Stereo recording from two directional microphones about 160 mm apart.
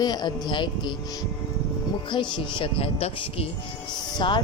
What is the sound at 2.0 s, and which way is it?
Speech, 30° left (ahead or behind).